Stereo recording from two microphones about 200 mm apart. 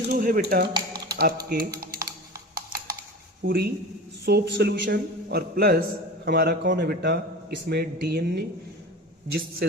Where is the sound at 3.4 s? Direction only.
50° right (ahead or behind).